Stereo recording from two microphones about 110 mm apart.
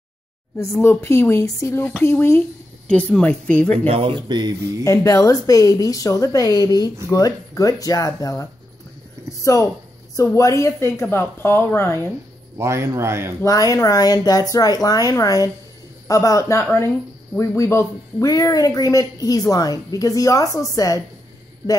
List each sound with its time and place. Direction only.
0.8 s a woman's voice: 25° left (ahead or behind)
2.9 s speech: 10° left (ahead or behind)
3.7 s speech: 65° right (ahead or behind); by 4.8 s 40° right (ahead or behind)
4.8 s a woman's voice: 30° left (ahead or behind)
12.5 s speech: 25° right (ahead or behind)
13.4 s speech: 30° left (ahead or behind)